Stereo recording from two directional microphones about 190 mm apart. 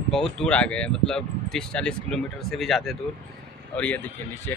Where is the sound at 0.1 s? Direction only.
Centre (ahead or behind).